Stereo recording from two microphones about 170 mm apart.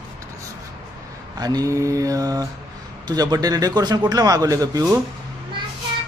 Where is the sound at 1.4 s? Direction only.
20° right (ahead or behind).